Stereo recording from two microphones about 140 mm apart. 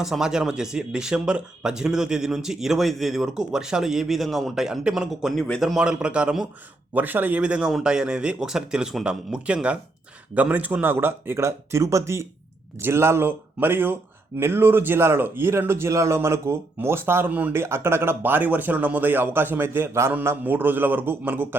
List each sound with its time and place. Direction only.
0.0 s speech: 5° right (ahead or behind)